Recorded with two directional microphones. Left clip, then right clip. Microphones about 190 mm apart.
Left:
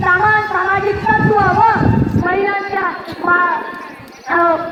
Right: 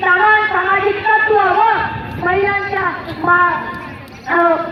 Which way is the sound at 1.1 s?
40° right (ahead or behind).